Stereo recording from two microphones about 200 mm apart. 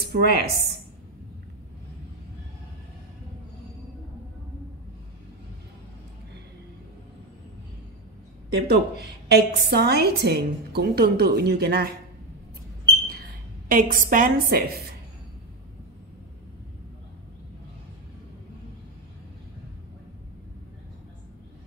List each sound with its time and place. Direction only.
0.0 s a woman's voice: 50° right (ahead or behind)
8.5 s a woman's voice: 55° right (ahead or behind)
13.1 s a woman's voice: 45° right (ahead or behind)